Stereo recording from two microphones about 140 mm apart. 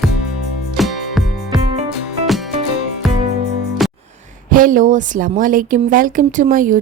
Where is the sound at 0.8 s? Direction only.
Centre (ahead or behind).